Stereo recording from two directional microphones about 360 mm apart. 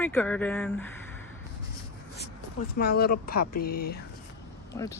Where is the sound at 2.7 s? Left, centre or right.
Left.